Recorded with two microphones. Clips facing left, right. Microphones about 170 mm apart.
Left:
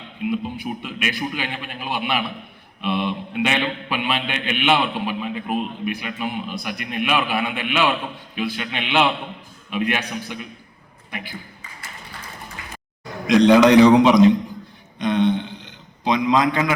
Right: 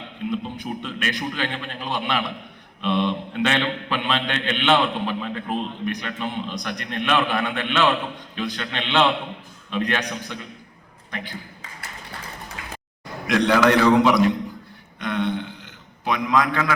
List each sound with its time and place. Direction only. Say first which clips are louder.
0.2 s a man's voice: left 3 dB; 10° left (ahead or behind)
13.2 s a man's voice: left 5 dB; 15° left (ahead or behind)
14.9 s a sound: left 6 dB; 20° left (ahead or behind)